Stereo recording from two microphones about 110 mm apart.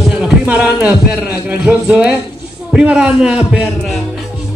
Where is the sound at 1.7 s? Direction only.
10° right (ahead or behind).